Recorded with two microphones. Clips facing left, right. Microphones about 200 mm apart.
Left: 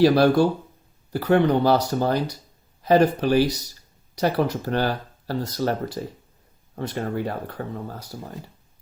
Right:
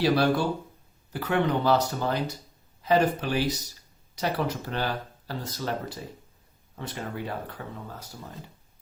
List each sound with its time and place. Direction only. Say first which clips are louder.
0.0 s speech: left 7 dB; 40° left (ahead or behind)